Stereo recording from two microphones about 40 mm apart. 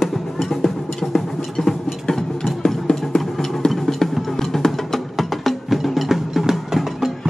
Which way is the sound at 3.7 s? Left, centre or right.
Centre.